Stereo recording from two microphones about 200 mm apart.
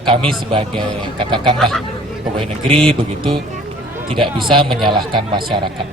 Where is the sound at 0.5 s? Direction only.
25° right (ahead or behind).